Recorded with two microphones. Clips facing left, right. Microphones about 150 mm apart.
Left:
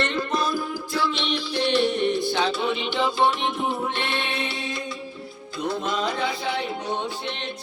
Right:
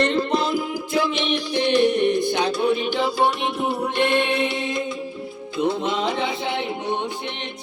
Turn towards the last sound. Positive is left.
turn(degrees=-20)  # may be behind; listen again after turning